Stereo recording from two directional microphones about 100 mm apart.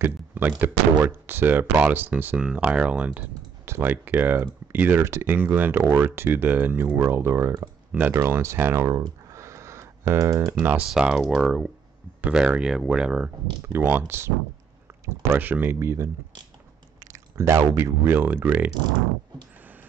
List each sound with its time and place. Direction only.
0.0 s artillery fire: 20° right (ahead or behind)
0.6 s speech: 20° right (ahead or behind)
9.3 s a sound: 30° right (ahead or behind)
10.6 s speech: 15° right (ahead or behind)
13.8 s speech: 20° right (ahead or behind)
18.7 s speech: 45° right (ahead or behind)